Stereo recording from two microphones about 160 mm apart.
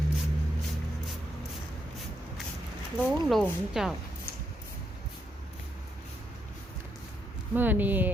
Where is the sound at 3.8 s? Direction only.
5° right (ahead or behind).